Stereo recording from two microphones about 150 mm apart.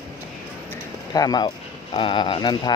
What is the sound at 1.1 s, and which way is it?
Speech, 25° left (ahead or behind).